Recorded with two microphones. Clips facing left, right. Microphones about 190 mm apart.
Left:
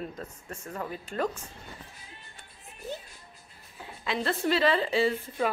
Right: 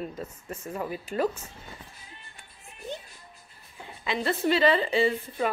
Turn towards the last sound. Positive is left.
turn(degrees=0)  # may be behind; listen again after turning